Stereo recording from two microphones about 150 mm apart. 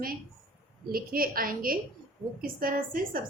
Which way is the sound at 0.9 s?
75° right (ahead or behind).